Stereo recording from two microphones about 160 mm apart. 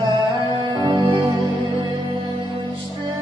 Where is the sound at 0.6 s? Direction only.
30° right (ahead or behind).